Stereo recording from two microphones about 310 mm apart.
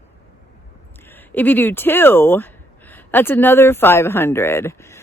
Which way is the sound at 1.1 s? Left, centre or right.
Centre.